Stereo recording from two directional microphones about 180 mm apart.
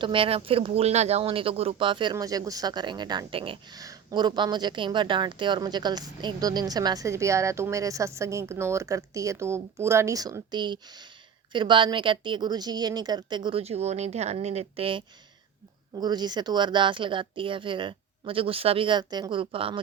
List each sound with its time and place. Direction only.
0.0 s speech: 30° right (ahead or behind)